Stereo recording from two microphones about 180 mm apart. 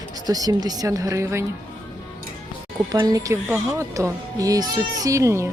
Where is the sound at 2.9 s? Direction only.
20° right (ahead or behind).